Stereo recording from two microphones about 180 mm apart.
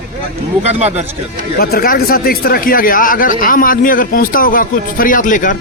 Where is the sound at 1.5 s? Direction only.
55° left (ahead or behind).